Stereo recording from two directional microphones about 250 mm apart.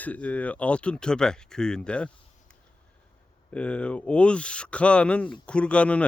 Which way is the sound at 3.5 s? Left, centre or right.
Centre.